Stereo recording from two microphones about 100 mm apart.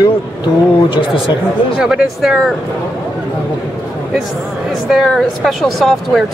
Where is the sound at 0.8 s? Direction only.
55° left (ahead or behind).